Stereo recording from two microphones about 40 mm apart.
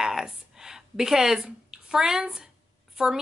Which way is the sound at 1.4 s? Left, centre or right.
Centre.